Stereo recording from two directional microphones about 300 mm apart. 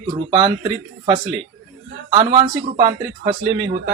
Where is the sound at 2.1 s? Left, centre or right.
Centre.